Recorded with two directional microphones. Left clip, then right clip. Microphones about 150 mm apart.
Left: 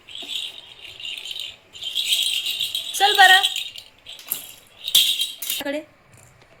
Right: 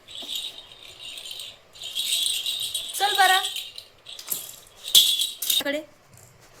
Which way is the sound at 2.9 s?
25° left (ahead or behind).